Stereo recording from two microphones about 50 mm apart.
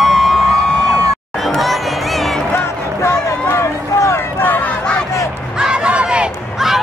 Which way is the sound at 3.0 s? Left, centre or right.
Left.